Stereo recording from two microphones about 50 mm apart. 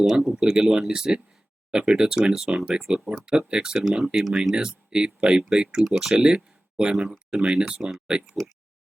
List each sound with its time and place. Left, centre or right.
0.0 s speech: centre
6.1 s speech: centre
6.9 s speech: centre